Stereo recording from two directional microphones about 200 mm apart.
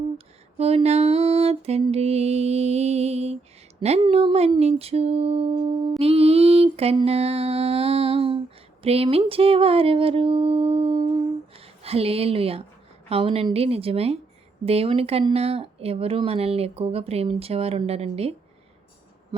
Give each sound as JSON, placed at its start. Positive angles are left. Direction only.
{"t": 0.6, "sound": "mantra", "side_deg": -30}
{"t": 3.8, "sound": "speech", "side_deg": -30}
{"t": 6.0, "sound": "mantra", "side_deg": -30}
{"t": 8.8, "sound": "speech", "side_deg": -30}
{"t": 19.3, "sound": "a sound", "side_deg": -20}